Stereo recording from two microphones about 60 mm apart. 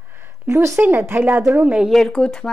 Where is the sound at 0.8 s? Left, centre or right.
Right.